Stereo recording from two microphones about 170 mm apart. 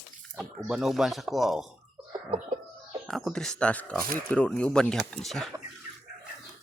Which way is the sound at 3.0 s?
Centre (ahead or behind).